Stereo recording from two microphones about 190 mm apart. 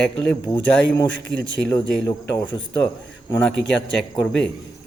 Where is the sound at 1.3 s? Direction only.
5° left (ahead or behind).